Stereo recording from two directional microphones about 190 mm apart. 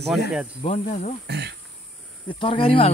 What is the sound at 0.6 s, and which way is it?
Cricket, 40° left (ahead or behind).